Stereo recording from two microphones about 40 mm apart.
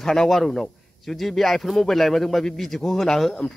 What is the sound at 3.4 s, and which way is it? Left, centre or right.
Speech, left.